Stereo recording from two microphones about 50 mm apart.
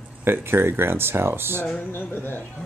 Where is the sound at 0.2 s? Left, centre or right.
Right.